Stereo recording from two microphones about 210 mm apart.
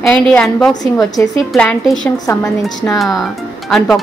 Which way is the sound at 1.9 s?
15° left (ahead or behind).